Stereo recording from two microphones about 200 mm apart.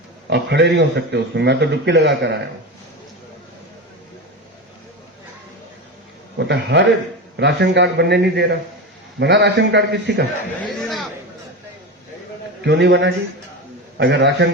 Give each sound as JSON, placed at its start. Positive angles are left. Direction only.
{"t": 0.3, "sound": "a man's voice", "side_deg": -60}
{"t": 6.4, "sound": "a man's voice", "side_deg": -60}
{"t": 10.6, "sound": "a man's voice", "side_deg": 0}
{"t": 12.6, "sound": "a man's voice", "side_deg": -60}